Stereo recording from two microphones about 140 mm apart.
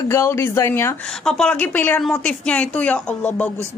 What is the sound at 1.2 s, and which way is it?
Speech, 5° left (ahead or behind).